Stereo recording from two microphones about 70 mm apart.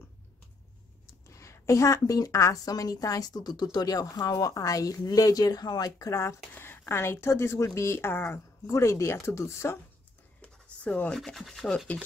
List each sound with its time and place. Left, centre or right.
1.2 s a woman's voice: left
5.9 s speech: left
6.5 s a sound: left
6.9 s speech: left
8.6 s speech: left
10.4 s a sound: centre
11.1 s rub: centre